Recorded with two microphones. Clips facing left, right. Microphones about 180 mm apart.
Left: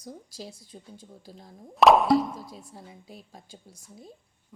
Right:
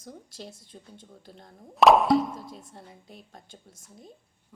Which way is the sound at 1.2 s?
Centre (ahead or behind).